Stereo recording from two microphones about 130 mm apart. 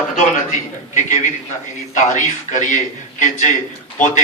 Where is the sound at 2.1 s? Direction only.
75° left (ahead or behind).